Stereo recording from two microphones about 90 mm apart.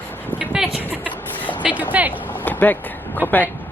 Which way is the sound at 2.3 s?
20° left (ahead or behind).